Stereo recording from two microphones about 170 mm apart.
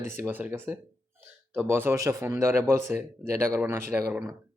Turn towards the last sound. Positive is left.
turn(degrees=-15)  # may be behind; listen again after turning